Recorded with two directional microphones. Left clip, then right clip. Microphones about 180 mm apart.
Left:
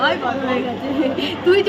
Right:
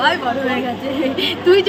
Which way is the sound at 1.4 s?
10° left (ahead or behind).